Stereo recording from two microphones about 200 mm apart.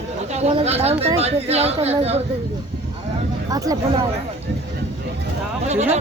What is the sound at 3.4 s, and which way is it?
Speech, 20° right (ahead or behind).